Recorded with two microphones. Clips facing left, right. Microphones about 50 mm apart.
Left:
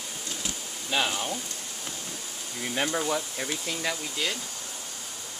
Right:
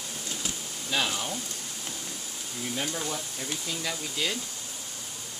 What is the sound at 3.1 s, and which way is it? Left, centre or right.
Speech, left.